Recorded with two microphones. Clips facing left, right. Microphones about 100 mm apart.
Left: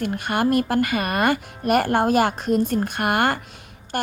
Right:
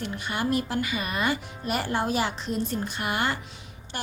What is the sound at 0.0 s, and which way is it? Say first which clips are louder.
A woman's voice: left 7 dB; 55° left (ahead or behind).